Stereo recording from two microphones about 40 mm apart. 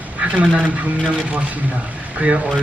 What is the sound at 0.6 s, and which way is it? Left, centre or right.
Speech, right.